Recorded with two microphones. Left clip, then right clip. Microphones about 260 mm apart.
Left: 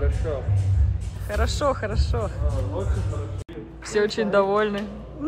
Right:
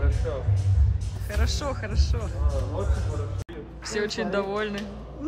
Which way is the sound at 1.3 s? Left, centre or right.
Centre.